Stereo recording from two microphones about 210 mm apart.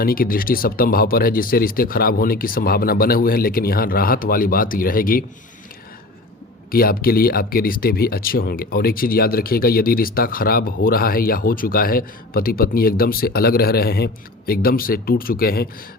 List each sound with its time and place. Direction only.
0.0 s speech: 45° left (ahead or behind)
6.7 s speech: 45° left (ahead or behind)